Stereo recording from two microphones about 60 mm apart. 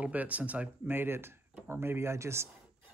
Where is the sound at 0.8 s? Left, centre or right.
Right.